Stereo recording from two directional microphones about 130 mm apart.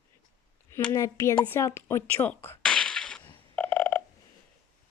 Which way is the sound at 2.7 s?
5° left (ahead or behind).